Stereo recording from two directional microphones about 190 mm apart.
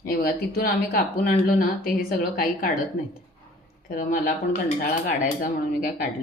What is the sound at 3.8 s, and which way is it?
Speech, 45° left (ahead or behind).